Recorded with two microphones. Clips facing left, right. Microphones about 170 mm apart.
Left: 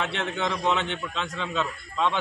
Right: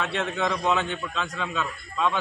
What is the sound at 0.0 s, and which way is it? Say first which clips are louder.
A man's voice: right 1 dB; 25° left (ahead or behind).